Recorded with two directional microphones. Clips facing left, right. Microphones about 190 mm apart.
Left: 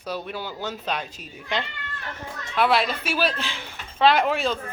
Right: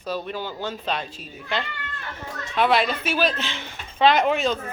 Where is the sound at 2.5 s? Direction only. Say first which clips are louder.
Right 1 dB; centre (ahead or behind).